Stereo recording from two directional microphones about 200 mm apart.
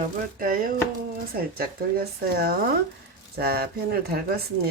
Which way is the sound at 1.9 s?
50° right (ahead or behind).